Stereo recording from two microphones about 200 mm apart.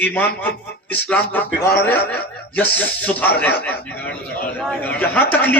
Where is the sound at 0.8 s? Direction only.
10° left (ahead or behind).